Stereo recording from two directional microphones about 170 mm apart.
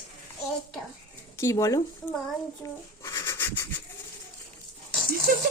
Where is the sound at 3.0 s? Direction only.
20° left (ahead or behind).